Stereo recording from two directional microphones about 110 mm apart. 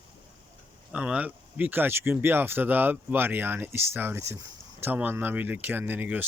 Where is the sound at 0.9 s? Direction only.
10° right (ahead or behind).